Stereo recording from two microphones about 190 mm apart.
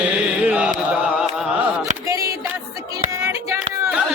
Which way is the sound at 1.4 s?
5° right (ahead or behind).